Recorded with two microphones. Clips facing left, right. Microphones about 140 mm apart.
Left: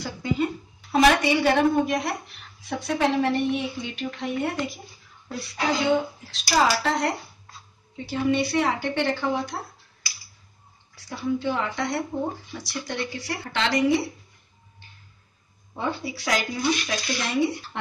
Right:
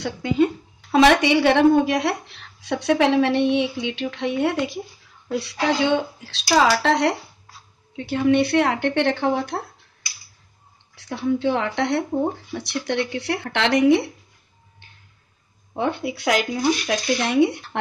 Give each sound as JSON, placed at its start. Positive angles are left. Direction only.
{"t": 0.0, "sound": "a woman's voice", "side_deg": -75}
{"t": 7.9, "sound": "speech", "side_deg": -60}
{"t": 11.0, "sound": "speech", "side_deg": -65}
{"t": 14.8, "sound": "a sound", "side_deg": -60}
{"t": 15.7, "sound": "speech", "side_deg": -60}